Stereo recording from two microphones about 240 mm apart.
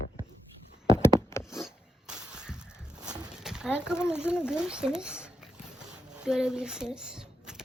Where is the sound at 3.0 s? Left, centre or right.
Centre.